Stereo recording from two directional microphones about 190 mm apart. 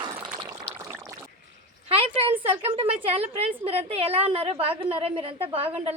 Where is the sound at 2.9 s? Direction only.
30° right (ahead or behind).